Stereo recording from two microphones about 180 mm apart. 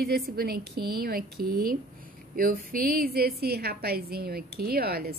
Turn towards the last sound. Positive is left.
turn(degrees=-60)  # may be behind; listen again after turning